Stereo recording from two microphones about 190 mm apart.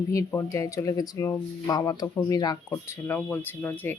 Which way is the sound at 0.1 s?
15° left (ahead or behind).